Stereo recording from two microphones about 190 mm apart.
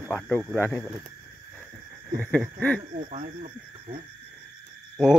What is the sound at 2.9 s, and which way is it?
Speech, 40° right (ahead or behind).